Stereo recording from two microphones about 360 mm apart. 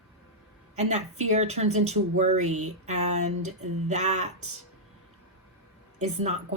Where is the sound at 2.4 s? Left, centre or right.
Right.